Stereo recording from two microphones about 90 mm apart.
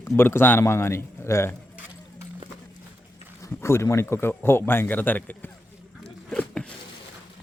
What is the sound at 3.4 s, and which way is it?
A man's voice, 30° left (ahead or behind).